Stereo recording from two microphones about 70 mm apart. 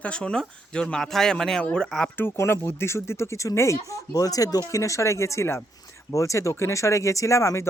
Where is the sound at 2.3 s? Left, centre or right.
Left.